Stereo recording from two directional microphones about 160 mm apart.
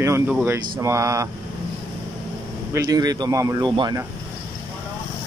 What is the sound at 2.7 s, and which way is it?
Speech, 25° right (ahead or behind).